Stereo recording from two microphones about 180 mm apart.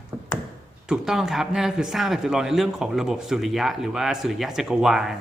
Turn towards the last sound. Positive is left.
turn(degrees=0)  # may be behind; listen again after turning